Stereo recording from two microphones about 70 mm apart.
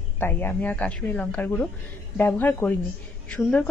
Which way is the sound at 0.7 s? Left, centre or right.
Centre.